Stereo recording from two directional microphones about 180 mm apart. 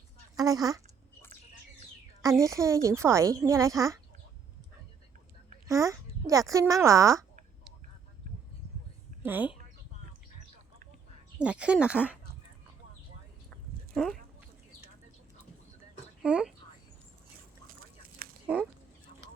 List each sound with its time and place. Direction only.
0.3 s a woman's voice: 20° right (ahead or behind)
2.2 s a woman's voice: 20° right (ahead or behind)
5.6 s a child's voice: 20° right (ahead or behind)
9.2 s a woman's voice: 10° right (ahead or behind)
11.3 s a woman's voice: 5° right (ahead or behind)
13.9 s speech: 5° left (ahead or behind)
16.2 s speech: 5° right (ahead or behind)
18.4 s fowl: 10° right (ahead or behind)